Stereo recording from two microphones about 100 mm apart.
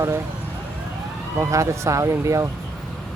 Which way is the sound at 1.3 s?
30° right (ahead or behind).